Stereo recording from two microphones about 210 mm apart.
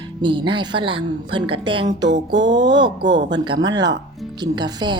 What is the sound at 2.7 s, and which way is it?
A woman's voice, 20° right (ahead or behind).